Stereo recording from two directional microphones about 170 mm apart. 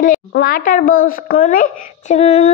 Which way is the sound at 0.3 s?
60° left (ahead or behind).